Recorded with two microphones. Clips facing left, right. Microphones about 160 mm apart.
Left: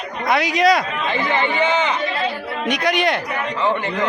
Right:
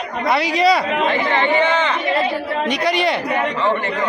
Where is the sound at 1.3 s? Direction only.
10° left (ahead or behind).